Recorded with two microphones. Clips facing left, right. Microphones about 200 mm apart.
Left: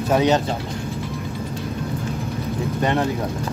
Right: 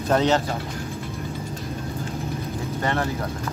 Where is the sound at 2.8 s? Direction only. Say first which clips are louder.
Left 4 dB; 20° left (ahead or behind).